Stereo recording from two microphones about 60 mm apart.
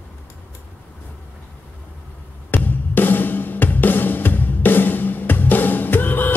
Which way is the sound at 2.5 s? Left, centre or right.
Left.